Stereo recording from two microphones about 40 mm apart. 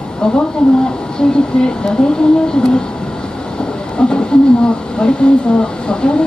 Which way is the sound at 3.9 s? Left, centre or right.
Left.